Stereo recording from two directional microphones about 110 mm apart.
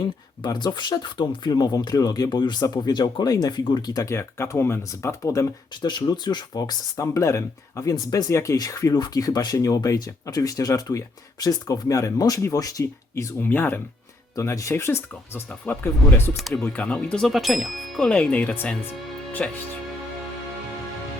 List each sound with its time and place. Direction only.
0.4 s speech: 40° left (ahead or behind)
5.9 s speech: 40° left (ahead or behind); by 13.8 s 20° left (ahead or behind)
14.3 s speech: 30° left (ahead or behind)
16.4 s speech: 5° left (ahead or behind)